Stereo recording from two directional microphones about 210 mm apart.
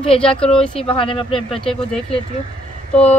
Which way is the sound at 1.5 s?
5° left (ahead or behind).